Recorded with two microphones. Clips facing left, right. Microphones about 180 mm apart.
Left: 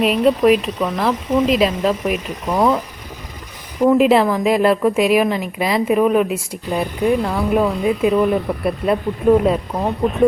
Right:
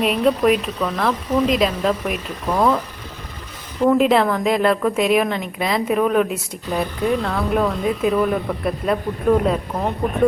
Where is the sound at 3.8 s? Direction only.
5° left (ahead or behind).